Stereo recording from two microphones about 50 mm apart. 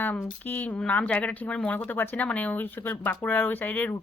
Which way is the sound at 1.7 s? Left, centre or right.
Left.